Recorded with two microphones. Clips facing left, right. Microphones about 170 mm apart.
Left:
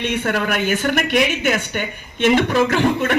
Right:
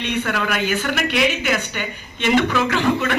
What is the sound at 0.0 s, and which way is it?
A man's voice, 45° left (ahead or behind).